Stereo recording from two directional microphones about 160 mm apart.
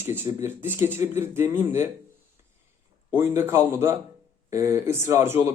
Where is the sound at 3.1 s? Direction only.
15° right (ahead or behind).